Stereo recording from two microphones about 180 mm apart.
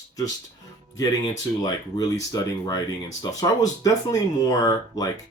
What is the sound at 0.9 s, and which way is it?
Speech, 20° left (ahead or behind).